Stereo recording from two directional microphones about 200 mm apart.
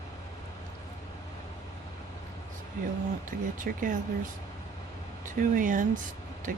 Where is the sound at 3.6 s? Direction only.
40° right (ahead or behind).